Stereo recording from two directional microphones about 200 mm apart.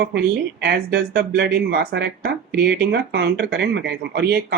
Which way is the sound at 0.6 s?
50° right (ahead or behind).